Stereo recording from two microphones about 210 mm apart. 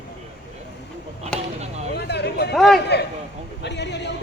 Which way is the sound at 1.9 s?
50° left (ahead or behind).